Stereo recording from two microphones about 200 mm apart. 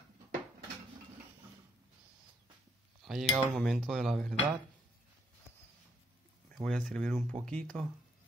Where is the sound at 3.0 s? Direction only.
Centre (ahead or behind).